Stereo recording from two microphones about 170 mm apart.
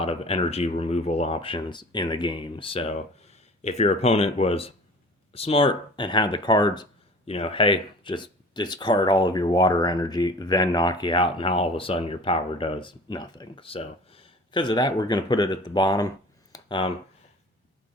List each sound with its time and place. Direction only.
0.0 s speech: 35° left (ahead or behind)